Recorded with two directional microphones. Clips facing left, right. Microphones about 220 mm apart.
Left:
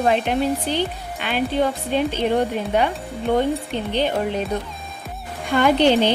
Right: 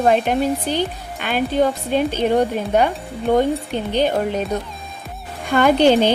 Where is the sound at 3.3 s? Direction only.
40° right (ahead or behind).